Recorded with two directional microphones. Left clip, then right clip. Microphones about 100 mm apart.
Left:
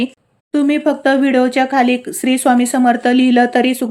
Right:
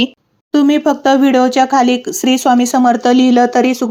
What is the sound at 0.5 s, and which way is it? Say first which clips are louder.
A woman's voice: right 3 dB; 20° right (ahead or behind).